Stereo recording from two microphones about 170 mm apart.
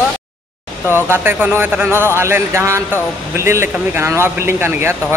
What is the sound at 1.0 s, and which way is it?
A man's voice, 15° right (ahead or behind).